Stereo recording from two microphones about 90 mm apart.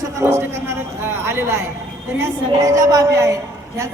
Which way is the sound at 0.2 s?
30° right (ahead or behind).